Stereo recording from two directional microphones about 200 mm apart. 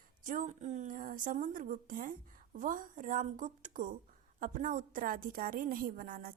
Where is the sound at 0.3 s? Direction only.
40° right (ahead or behind).